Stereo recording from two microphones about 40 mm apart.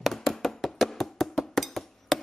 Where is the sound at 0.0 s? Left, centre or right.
Centre.